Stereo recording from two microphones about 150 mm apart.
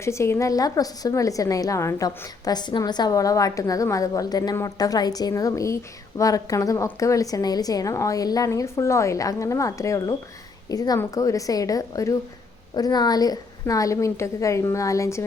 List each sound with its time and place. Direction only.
0.0 s a woman's voice: 20° left (ahead or behind)